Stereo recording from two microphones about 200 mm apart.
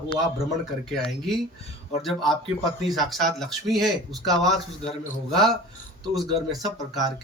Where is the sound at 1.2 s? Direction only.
Centre (ahead or behind).